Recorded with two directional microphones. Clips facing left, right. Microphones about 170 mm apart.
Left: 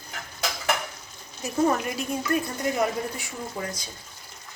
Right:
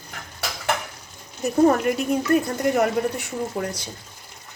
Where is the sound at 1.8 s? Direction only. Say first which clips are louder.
Right 7 dB; 55° right (ahead or behind).